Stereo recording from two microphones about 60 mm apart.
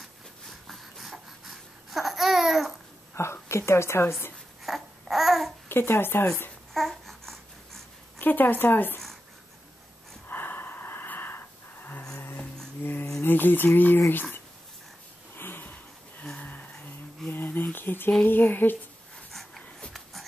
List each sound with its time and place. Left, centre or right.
0.5 s a sound: centre
3.2 s a woman's voice: left
4.6 s babbling: centre
5.7 s speech: left
6.7 s babbling: centre
8.2 s speech: left
10.2 s snort: left
12.8 s a sound: left
13.7 s speech: left
15.3 s a sound: left
18.2 s speech: left
19.9 s a sound: centre